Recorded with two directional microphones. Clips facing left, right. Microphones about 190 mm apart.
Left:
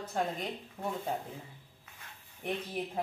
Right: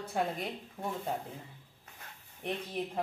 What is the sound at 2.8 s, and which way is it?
Speech, 10° left (ahead or behind).